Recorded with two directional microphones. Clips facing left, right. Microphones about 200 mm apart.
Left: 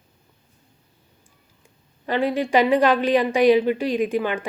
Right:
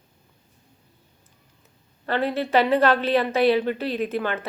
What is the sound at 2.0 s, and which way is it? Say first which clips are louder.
Speech: left 2 dB; 10° left (ahead or behind).